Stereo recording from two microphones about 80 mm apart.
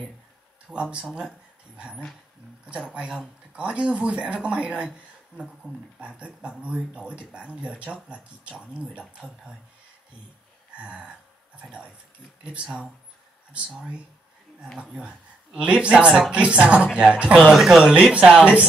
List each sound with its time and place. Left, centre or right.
0.7 s speech: centre
3.5 s speech: centre
5.9 s speech: centre
11.6 s speech: centre
14.8 s speech: centre